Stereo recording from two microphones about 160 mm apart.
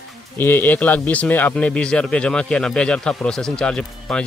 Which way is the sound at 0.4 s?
15° left (ahead or behind).